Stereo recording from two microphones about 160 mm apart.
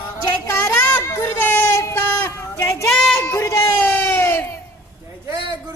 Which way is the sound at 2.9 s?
5° left (ahead or behind).